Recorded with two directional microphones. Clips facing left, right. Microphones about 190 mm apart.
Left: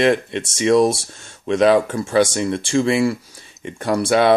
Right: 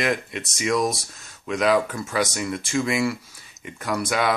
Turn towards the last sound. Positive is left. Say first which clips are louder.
# left 8 dB
turn(degrees=30)  # may be behind; listen again after turning